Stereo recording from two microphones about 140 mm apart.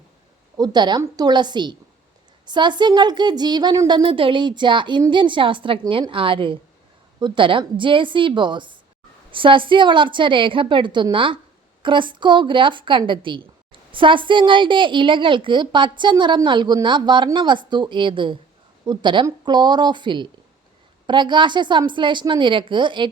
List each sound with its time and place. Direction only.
0.5 s a woman's voice: 30° right (ahead or behind)